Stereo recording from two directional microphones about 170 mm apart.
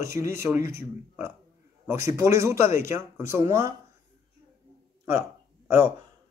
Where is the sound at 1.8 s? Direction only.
15° right (ahead or behind).